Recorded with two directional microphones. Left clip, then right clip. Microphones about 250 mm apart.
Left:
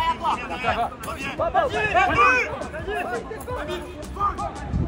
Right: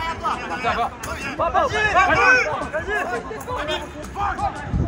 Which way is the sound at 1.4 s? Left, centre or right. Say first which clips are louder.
Right 3 dB; right.